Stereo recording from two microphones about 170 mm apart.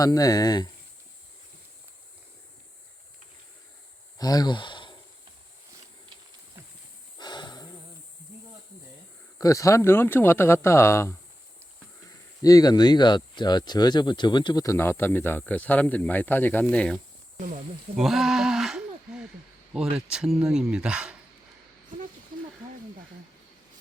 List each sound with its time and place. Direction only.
0.0 s speech: 20° left (ahead or behind)
4.2 s speech: 20° left (ahead or behind)
7.2 s a sound: 25° left (ahead or behind)
9.4 s speech: 20° left (ahead or behind)
17.9 s a sound: centre (ahead or behind)
19.7 s speech: 5° right (ahead or behind)